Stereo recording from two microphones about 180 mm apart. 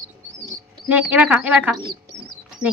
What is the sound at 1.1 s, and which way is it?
Speech, 10° right (ahead or behind).